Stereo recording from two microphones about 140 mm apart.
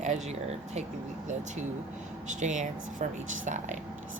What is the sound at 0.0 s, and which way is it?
Speech, 55° right (ahead or behind).